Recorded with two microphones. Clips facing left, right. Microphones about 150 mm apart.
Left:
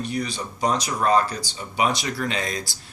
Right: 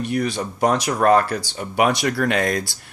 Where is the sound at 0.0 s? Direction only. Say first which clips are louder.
Right 5 dB; 60° right (ahead or behind).